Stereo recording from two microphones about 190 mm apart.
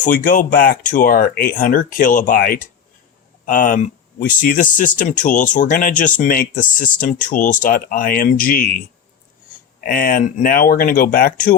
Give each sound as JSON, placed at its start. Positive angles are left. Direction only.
{"t": 0.0, "sound": "speech", "side_deg": 45}
{"t": 9.8, "sound": "speech", "side_deg": 45}